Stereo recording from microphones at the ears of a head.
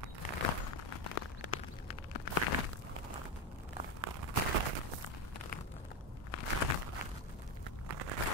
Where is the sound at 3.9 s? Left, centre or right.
Right.